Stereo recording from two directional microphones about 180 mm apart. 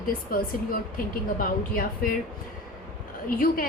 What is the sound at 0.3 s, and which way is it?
Speech, 50° left (ahead or behind).